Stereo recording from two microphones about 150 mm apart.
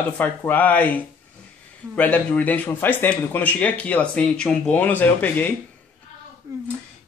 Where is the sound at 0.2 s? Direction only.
10° left (ahead or behind).